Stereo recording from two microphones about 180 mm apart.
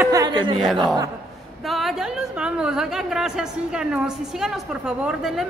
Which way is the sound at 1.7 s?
Centre (ahead or behind).